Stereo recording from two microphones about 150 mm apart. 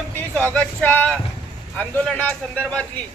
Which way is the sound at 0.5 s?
10° left (ahead or behind).